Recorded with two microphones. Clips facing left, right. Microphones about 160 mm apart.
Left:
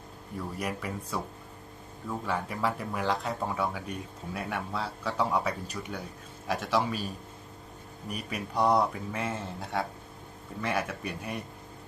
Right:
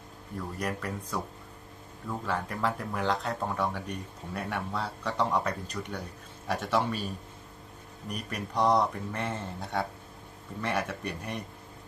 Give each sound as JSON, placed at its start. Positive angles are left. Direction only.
{"t": 0.3, "sound": "speech", "side_deg": 5}